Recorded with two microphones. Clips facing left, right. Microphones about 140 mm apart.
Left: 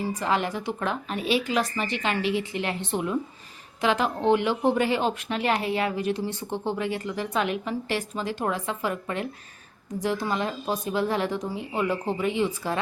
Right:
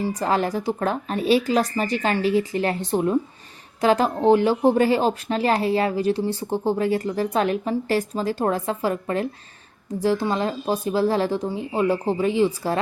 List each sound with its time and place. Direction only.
0.0 s speech: 35° right (ahead or behind)